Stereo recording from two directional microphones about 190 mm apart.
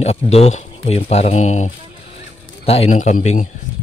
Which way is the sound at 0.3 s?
35° left (ahead or behind).